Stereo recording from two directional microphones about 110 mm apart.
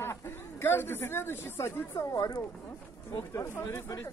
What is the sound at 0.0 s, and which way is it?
Speech, 25° left (ahead or behind).